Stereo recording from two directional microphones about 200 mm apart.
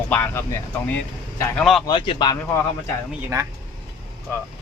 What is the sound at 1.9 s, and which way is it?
Speech, 25° left (ahead or behind).